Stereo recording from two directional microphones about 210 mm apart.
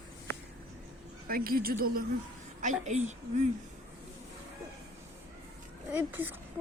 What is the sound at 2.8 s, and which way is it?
Speech, 35° right (ahead or behind).